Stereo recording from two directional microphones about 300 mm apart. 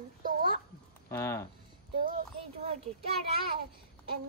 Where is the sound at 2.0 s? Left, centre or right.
Right.